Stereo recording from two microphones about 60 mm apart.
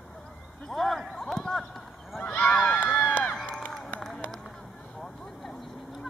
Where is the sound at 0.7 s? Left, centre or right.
Centre.